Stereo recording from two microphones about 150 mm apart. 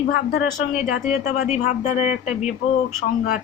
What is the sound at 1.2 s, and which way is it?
Speech, 55° left (ahead or behind).